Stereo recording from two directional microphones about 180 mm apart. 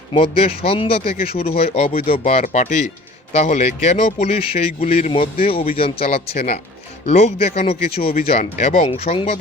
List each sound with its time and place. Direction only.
0.1 s speech: 30° left (ahead or behind)